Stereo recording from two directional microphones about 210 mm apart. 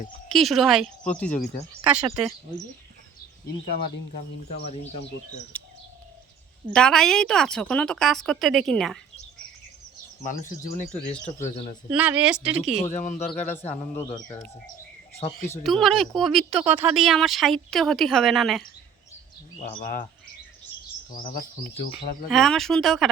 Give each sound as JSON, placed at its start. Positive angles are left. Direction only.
{"t": 0.3, "sound": "speech", "side_deg": 0}
{"t": 1.9, "sound": "speech", "side_deg": -5}
{"t": 4.6, "sound": "speech", "side_deg": 30}
{"t": 5.5, "sound": "bird", "side_deg": 5}
{"t": 6.7, "sound": "speech", "side_deg": 5}
{"t": 10.2, "sound": "speech", "side_deg": 40}
{"t": 11.9, "sound": "speech", "side_deg": -5}
{"t": 12.8, "sound": "speech", "side_deg": 35}
{"t": 15.6, "sound": "speech", "side_deg": 0}
{"t": 19.8, "sound": "speech", "side_deg": 40}
{"t": 21.1, "sound": "speech", "side_deg": 40}
{"t": 22.3, "sound": "speech", "side_deg": 0}